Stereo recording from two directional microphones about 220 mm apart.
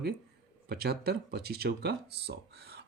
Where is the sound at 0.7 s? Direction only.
45° right (ahead or behind).